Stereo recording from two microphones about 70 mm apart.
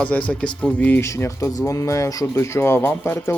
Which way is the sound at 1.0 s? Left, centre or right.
Left.